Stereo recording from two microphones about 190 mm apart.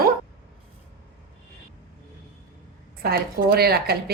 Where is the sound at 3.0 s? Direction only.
55° right (ahead or behind).